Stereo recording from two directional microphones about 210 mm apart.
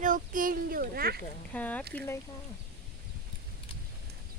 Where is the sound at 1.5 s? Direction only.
5° left (ahead or behind).